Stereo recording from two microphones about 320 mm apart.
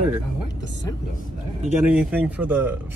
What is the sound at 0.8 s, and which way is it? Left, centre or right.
Speech, centre.